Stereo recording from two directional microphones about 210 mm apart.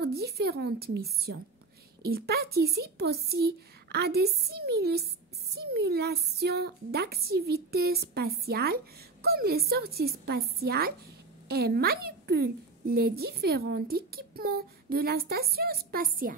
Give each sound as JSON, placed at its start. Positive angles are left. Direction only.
{"t": 0.0, "sound": "a woman's voice", "side_deg": -50}